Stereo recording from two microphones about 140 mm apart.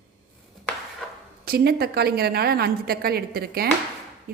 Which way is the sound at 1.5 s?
90° right.